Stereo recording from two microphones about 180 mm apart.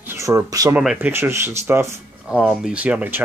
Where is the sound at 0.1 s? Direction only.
15° right (ahead or behind).